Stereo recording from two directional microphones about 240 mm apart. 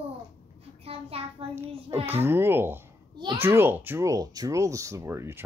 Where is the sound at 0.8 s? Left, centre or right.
Right.